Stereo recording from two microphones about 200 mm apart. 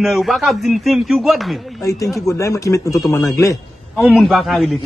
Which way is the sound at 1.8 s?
15° left (ahead or behind).